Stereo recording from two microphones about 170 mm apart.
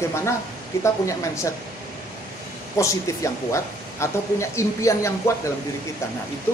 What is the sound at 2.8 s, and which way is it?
Speech, 20° left (ahead or behind).